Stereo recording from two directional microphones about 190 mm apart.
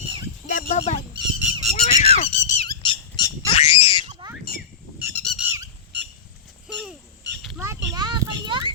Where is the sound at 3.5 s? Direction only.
30° left (ahead or behind).